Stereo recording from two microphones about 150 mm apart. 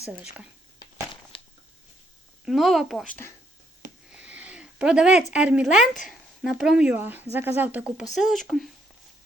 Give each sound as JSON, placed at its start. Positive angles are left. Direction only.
{"t": 0.0, "sound": "a woman's voice", "side_deg": -10}
{"t": 1.3, "sound": "a sound", "side_deg": 35}
{"t": 2.4, "sound": "speech", "side_deg": 0}
{"t": 4.1, "sound": "a woman's voice", "side_deg": -10}